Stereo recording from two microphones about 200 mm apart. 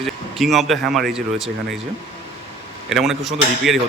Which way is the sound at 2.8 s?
Centre (ahead or behind).